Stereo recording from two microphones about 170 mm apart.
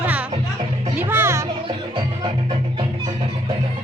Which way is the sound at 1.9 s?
25° right (ahead or behind).